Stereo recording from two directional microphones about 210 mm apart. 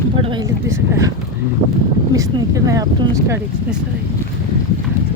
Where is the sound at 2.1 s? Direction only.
15° right (ahead or behind).